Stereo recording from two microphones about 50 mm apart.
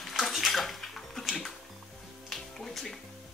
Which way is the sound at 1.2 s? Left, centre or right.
Centre.